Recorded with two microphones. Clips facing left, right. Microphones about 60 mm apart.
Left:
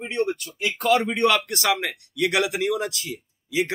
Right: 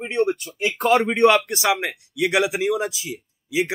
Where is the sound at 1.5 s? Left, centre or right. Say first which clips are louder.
Right 2 dB; centre.